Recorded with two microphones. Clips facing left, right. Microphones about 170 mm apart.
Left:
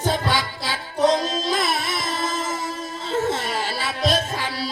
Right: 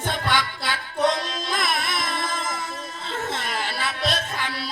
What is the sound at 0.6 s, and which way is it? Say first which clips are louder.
Music: left 5 dB; 25° left (ahead or behind).